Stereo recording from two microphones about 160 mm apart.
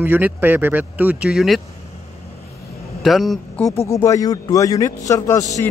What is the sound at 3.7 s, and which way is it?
A man's voice, 20° left (ahead or behind).